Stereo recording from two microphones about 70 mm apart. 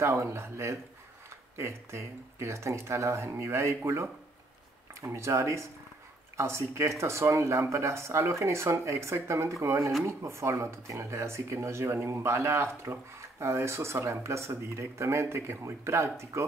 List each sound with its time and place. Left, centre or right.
0.0 s speech: right